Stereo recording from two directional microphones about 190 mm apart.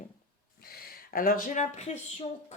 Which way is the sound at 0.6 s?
50° left (ahead or behind).